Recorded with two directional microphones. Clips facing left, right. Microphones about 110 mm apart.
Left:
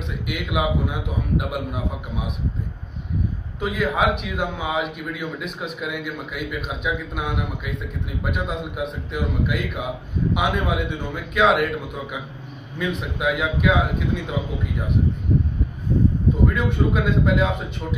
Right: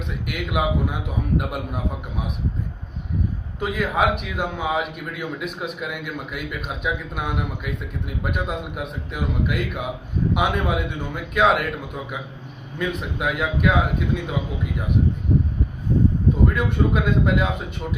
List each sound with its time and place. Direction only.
0.3 s speech: centre (ahead or behind)
3.5 s speech: centre (ahead or behind)
16.4 s speech: centre (ahead or behind)